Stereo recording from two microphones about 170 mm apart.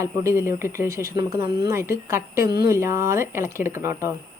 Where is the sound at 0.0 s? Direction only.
15° right (ahead or behind).